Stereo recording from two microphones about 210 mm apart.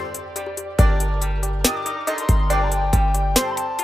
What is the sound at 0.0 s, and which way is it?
Music, centre (ahead or behind).